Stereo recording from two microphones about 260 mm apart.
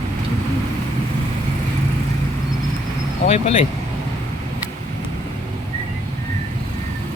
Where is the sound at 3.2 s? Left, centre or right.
Left.